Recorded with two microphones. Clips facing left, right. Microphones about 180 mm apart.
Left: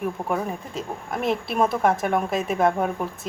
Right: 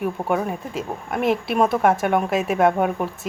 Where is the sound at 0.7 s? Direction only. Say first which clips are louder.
Right 3 dB; centre (ahead or behind).